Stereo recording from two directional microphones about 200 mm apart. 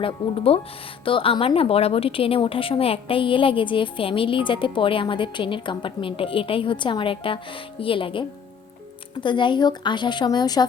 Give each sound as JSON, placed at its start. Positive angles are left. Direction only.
{"t": 0.0, "sound": "speech", "side_deg": 30}
{"t": 9.2, "sound": "speech", "side_deg": 25}